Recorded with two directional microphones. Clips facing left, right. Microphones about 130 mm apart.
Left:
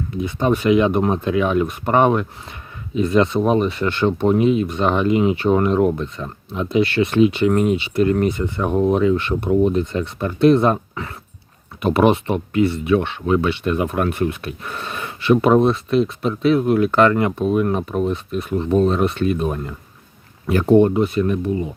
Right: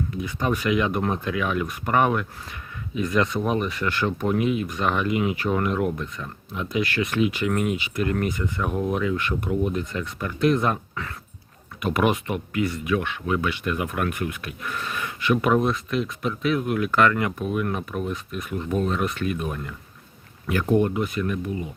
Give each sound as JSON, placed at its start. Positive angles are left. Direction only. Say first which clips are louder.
{"t": 0.2, "sound": "speech", "louder": "left 8 dB", "side_deg": 25}